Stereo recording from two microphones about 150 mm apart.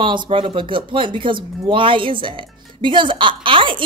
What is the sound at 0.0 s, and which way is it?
Speech, 30° right (ahead or behind).